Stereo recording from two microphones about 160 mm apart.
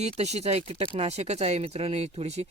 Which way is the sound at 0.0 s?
45° right (ahead or behind).